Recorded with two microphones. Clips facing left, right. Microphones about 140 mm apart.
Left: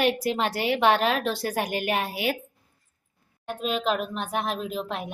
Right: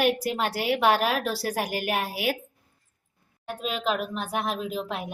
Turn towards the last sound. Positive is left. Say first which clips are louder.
# even
turn(degrees=0)  # may be behind; listen again after turning